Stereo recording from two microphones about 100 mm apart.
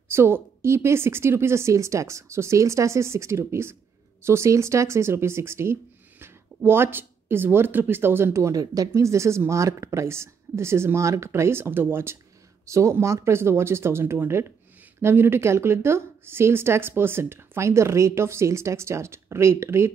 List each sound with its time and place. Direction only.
0.1 s speech: 25° right (ahead or behind)